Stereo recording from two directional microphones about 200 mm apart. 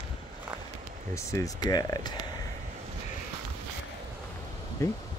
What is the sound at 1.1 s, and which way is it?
Speech, 15° left (ahead or behind).